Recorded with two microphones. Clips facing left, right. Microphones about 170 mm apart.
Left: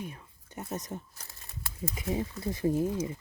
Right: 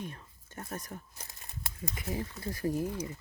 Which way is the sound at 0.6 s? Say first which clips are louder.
Left 4 dB; 20° left (ahead or behind).